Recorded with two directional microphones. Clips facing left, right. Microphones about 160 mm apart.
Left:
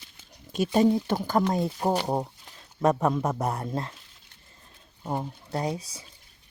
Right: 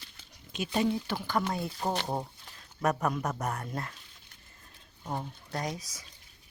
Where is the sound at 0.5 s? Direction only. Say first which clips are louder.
Left 7 dB; 45° left (ahead or behind).